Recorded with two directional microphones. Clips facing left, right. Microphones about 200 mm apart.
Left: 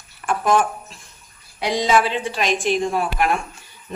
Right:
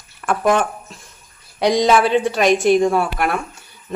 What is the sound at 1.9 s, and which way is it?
Chopping, 55° right (ahead or behind).